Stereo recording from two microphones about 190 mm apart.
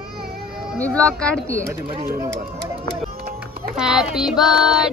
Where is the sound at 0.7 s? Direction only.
5° left (ahead or behind).